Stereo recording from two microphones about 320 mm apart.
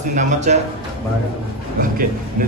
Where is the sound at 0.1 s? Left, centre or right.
Right.